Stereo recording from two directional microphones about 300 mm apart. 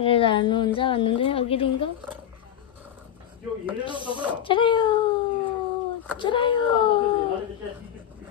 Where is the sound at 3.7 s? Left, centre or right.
Centre.